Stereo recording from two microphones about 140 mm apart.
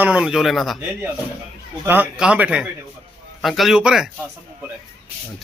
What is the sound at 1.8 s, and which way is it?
A man's voice, 15° right (ahead or behind).